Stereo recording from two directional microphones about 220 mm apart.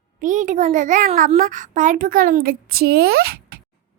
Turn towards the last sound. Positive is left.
turn(degrees=-45)  # may be behind; listen again after turning